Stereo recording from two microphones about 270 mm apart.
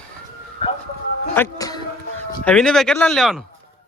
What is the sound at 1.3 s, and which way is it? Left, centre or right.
Music, centre.